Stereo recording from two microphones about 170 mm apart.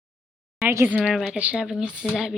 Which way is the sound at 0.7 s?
15° right (ahead or behind).